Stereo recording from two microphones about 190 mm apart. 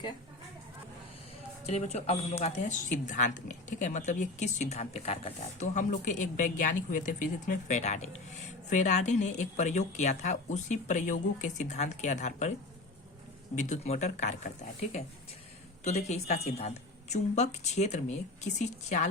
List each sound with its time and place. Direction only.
1.6 s speech: 35° left (ahead or behind)
13.6 s speech: 35° left (ahead or behind)
15.8 s speech: 35° left (ahead or behind)